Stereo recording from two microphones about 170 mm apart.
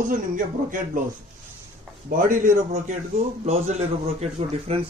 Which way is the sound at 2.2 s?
50° right (ahead or behind).